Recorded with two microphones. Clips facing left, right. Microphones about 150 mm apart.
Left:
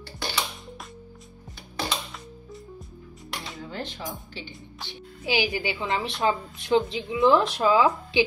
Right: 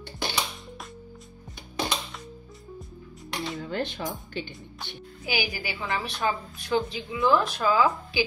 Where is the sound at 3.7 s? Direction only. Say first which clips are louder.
Right 3 dB; 60° right (ahead or behind).